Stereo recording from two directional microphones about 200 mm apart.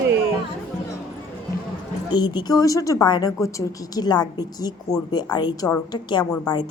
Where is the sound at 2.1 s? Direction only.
20° left (ahead or behind).